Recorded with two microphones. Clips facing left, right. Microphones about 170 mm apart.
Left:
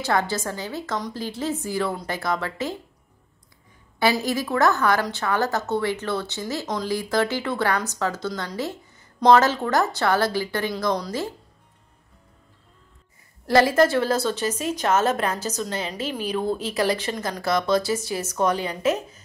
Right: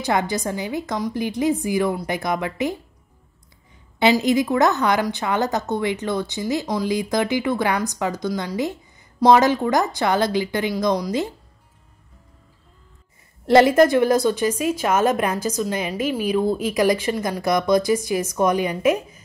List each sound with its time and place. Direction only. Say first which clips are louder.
0.0 s a woman's voice: right 2 dB; 15° right (ahead or behind)
4.0 s a woman's voice: right 5 dB; 20° right (ahead or behind)
13.5 s a woman's voice: right 4 dB; 20° right (ahead or behind)